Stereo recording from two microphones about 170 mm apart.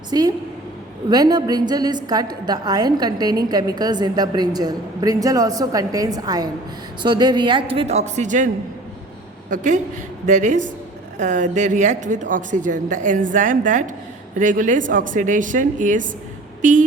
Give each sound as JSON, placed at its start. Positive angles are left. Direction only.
{"t": 0.1, "sound": "a woman's voice", "side_deg": -25}
{"t": 9.5, "sound": "a woman's voice", "side_deg": -45}